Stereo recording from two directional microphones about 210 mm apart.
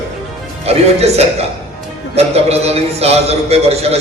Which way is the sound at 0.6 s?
30° right (ahead or behind).